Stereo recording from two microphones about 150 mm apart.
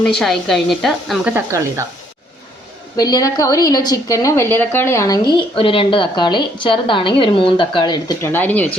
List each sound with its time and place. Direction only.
0.0 s speech: 5° left (ahead or behind)
1.3 s speech: 15° right (ahead or behind)
2.9 s a woman's voice: 25° left (ahead or behind)
5.5 s a woman's voice: 35° left (ahead or behind)
8.3 s speech: 10° left (ahead or behind)